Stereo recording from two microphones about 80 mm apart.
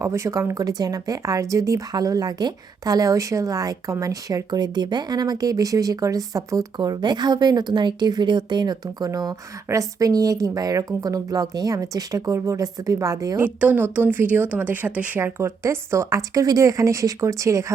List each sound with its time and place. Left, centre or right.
0.0 s speech: right
6.7 s a woman's voice: right
9.0 s speech: right
13.4 s a woman's voice: right
15.2 s speech: right